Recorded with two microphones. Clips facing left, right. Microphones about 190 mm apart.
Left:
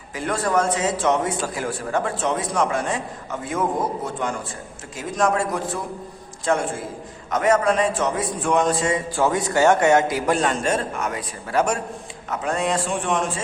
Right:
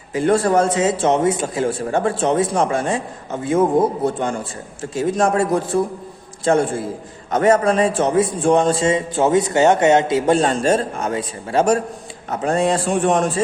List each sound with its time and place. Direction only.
0.1 s a man's voice: 30° right (ahead or behind)
7.3 s a man's voice: 30° right (ahead or behind)